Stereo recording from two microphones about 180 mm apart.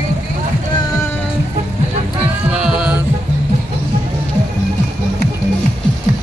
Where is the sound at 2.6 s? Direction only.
5° right (ahead or behind).